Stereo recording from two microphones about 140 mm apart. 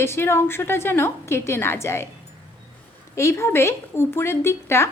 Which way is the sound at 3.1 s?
20° left (ahead or behind).